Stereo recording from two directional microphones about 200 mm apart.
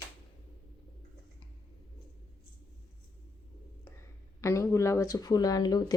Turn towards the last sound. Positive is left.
turn(degrees=20)  # may be behind; listen again after turning